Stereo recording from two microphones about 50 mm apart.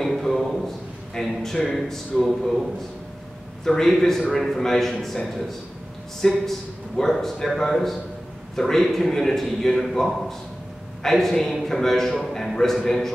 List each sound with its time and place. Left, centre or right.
0.0 s a sound: centre
1.2 s a man's voice: centre
3.6 s a man's voice: centre